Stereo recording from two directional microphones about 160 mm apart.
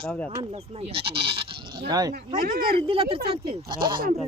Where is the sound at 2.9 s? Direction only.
35° right (ahead or behind).